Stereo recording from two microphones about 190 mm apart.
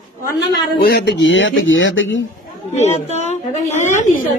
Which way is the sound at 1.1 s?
80° left.